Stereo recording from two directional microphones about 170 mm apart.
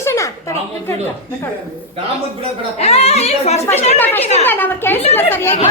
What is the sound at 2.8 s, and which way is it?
Speech, 40° left (ahead or behind).